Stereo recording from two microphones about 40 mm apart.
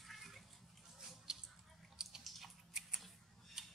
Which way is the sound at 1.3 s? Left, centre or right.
Centre.